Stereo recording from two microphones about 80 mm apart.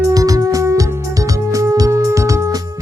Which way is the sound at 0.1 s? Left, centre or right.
Right.